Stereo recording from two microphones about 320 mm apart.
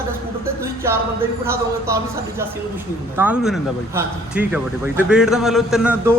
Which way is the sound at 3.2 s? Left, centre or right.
Centre.